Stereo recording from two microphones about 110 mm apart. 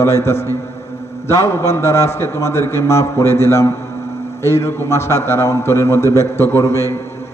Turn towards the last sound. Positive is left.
turn(degrees=30)  # may be behind; listen again after turning